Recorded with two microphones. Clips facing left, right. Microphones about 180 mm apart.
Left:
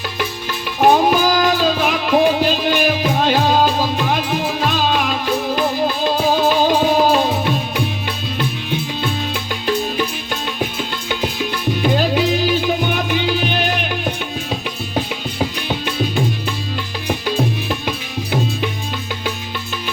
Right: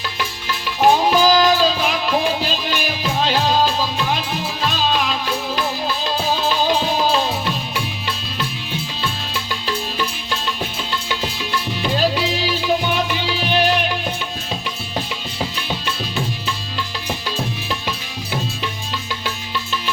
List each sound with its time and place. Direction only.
0.2 s music: 50° left (ahead or behind)
15.4 s music: 50° left (ahead or behind)